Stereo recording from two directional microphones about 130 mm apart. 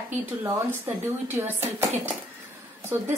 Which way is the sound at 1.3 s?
15° right (ahead or behind).